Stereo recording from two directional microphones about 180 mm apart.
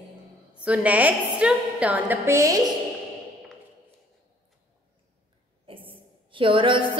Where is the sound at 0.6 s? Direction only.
10° right (ahead or behind).